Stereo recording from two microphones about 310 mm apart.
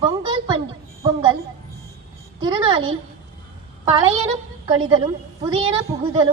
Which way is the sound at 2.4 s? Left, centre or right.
Centre.